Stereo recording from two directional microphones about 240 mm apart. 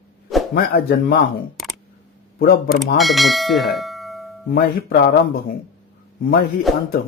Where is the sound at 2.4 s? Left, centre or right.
Left.